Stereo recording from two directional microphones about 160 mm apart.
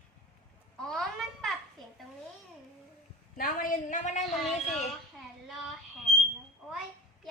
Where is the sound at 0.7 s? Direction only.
5° left (ahead or behind).